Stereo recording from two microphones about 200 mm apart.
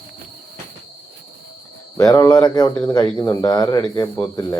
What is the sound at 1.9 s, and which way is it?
Speech, 15° left (ahead or behind).